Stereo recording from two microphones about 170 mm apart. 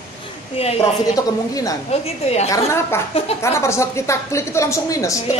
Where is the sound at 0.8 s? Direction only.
20° left (ahead or behind).